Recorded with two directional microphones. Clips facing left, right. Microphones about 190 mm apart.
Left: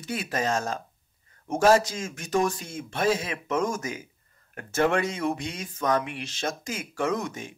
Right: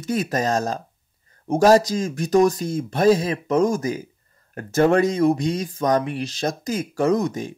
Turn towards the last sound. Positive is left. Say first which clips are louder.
# right 8 dB
turn(degrees=-35)  # may be behind; listen again after turning